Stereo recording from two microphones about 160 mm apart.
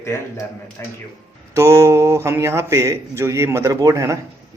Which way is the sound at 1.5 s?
20° right (ahead or behind).